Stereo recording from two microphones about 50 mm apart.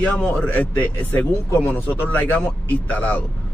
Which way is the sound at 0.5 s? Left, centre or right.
Left.